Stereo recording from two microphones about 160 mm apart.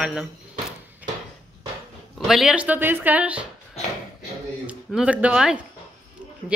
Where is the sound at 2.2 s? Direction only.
Centre (ahead or behind).